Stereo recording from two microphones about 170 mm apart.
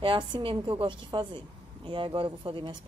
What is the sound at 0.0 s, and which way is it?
Speech, 30° right (ahead or behind).